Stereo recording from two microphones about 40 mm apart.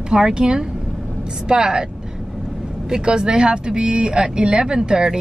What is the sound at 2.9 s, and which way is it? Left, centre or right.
Speech, centre.